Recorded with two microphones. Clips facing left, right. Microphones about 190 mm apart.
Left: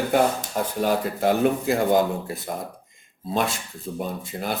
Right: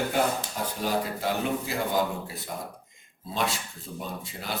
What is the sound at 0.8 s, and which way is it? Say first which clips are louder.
Speech: left 6 dB; 55° left (ahead or behind).